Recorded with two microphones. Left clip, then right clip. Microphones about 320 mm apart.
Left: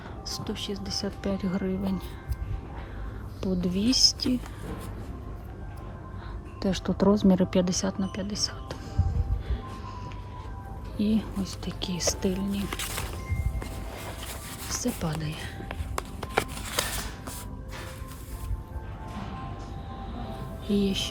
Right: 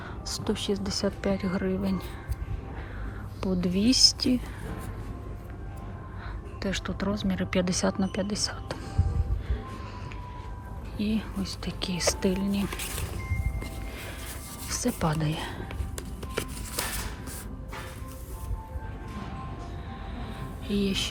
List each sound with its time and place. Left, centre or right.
0.3 s speech: centre
3.4 s speech: centre
6.6 s speech: centre
10.9 s speech: centre
14.7 s speech: centre
16.4 s a sound: left
20.1 s music: centre